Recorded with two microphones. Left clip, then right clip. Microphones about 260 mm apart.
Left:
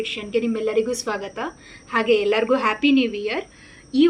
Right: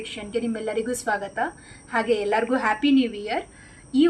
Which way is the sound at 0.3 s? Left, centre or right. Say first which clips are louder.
Left 5 dB; left.